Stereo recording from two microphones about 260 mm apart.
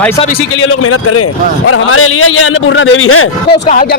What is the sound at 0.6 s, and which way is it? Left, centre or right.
A man's voice, left.